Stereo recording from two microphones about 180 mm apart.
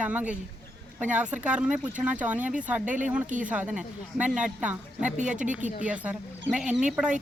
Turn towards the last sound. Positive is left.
turn(degrees=-5)  # may be behind; listen again after turning